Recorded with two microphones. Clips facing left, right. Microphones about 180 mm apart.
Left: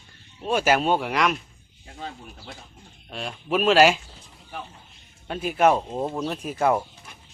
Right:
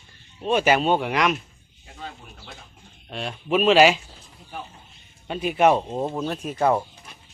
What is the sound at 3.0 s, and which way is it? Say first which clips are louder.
Speech: right 2 dB; centre (ahead or behind).